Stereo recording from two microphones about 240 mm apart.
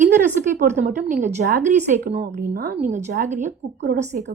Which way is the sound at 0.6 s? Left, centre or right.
Right.